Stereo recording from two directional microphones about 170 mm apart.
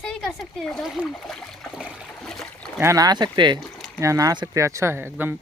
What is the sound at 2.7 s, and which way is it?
Speech, 20° right (ahead or behind).